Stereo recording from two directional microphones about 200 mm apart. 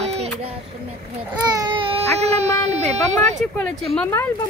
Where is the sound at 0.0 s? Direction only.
30° right (ahead or behind).